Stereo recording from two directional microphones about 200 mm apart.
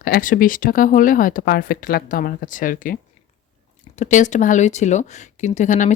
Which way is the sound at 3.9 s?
35° left (ahead or behind).